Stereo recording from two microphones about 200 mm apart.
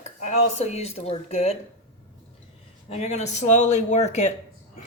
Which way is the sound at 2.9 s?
35° left (ahead or behind).